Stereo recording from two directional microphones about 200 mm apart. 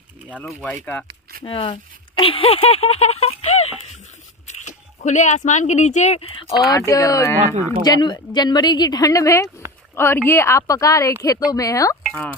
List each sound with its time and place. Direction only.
0.3 s speech: 5° left (ahead or behind)
1.4 s speech: 25° left (ahead or behind)
6.7 s speech: 15° left (ahead or behind)
7.4 s speech: 35° right (ahead or behind)
7.8 s speech: 20° left (ahead or behind)
12.0 s speech: 5° left (ahead or behind)